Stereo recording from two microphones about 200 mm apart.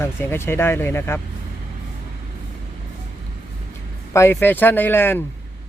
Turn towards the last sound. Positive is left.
turn(degrees=10)  # may be behind; listen again after turning